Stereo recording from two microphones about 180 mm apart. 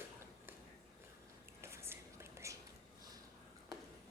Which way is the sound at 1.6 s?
15° right (ahead or behind).